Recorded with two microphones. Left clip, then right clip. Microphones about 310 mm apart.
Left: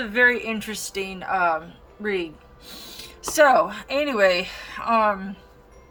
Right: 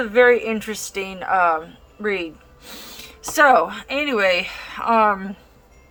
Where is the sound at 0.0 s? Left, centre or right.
Centre.